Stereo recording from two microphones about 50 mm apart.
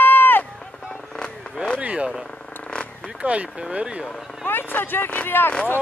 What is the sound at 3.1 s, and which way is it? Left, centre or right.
Speech, right.